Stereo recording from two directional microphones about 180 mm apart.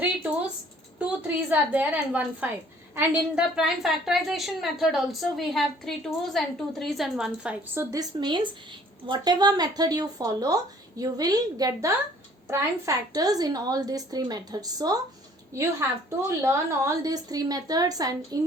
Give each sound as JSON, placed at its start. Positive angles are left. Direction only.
{"t": 0.9, "sound": "a woman's voice", "side_deg": -10}